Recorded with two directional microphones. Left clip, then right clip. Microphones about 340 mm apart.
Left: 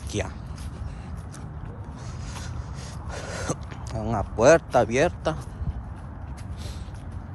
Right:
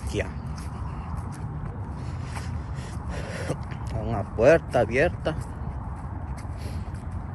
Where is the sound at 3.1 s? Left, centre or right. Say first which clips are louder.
Left 2 dB; centre.